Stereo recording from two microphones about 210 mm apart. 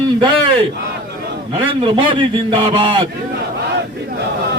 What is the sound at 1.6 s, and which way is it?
A man's voice, 25° right (ahead or behind).